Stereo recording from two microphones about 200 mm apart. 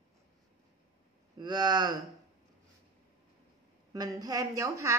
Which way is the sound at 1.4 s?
20° right (ahead or behind).